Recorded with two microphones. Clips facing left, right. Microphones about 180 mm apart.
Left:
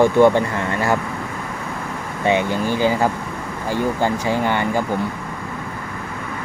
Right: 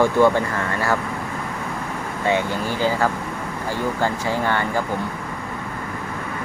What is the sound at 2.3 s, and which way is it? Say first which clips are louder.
Speech: left 3 dB; 15° left (ahead or behind).